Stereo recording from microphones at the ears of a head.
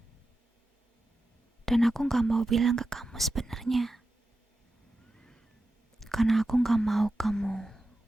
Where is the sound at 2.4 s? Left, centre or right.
Right.